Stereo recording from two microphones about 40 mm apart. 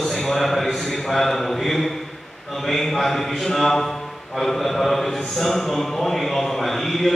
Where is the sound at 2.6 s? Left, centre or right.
Centre.